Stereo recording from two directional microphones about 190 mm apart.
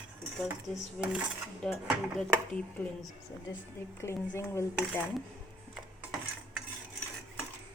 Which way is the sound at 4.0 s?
15° left (ahead or behind).